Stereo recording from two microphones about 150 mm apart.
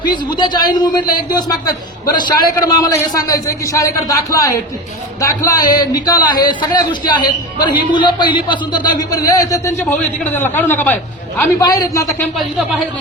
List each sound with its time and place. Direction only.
0.0 s a man's voice: 30° left (ahead or behind); by 11.4 s 10° left (ahead or behind)
11.6 s a man's voice: 25° left (ahead or behind)
12.0 s speech: centre (ahead or behind)